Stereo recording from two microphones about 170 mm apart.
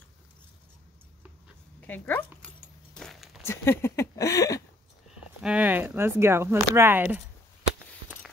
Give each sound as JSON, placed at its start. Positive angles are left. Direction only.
{"t": 1.8, "sound": "speech", "side_deg": 10}
{"t": 2.4, "sound": "keys jangling", "side_deg": 5}
{"t": 3.4, "sound": "speech", "side_deg": 15}
{"t": 5.4, "sound": "speech", "side_deg": -10}